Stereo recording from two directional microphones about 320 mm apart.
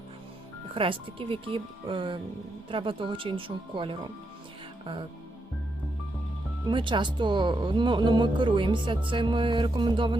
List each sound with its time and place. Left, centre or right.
0.7 s speech: centre
6.7 s speech: centre